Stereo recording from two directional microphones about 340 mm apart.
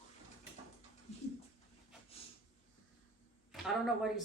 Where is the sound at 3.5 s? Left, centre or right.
Centre.